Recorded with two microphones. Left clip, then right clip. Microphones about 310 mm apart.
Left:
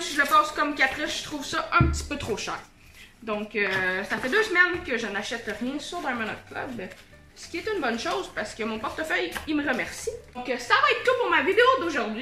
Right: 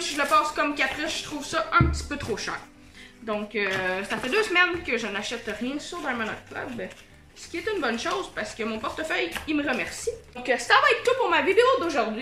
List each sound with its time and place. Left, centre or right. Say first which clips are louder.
0.1 s a woman's voice: left 2 dB; centre
10.4 s a woman's voice: right 3 dB; right
11.0 s a woman's voice: even; centre